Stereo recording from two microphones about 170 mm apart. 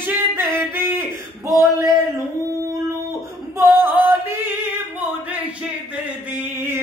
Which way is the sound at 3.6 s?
15° right (ahead or behind).